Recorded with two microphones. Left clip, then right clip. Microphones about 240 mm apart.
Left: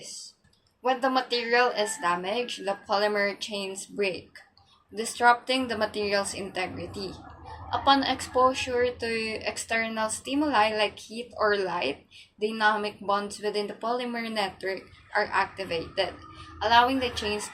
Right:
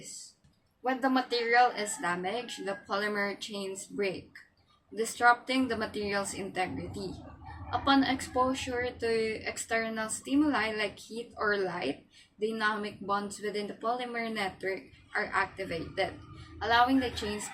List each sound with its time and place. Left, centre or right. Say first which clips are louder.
0.9 s a woman's voice: even; centre